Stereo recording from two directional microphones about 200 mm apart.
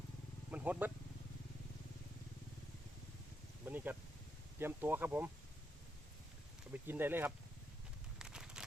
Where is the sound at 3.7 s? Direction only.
10° right (ahead or behind).